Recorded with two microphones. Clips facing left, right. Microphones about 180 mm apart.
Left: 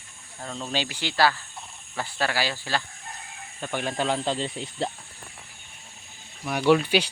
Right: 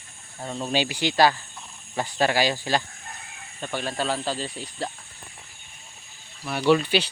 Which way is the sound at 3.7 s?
15° left (ahead or behind).